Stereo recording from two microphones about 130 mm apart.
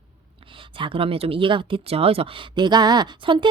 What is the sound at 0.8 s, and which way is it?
Speech, 45° right (ahead or behind).